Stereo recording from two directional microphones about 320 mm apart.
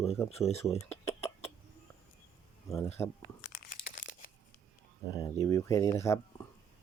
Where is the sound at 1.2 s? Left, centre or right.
Centre.